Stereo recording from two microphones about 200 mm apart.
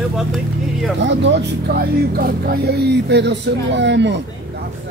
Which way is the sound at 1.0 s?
60° right (ahead or behind).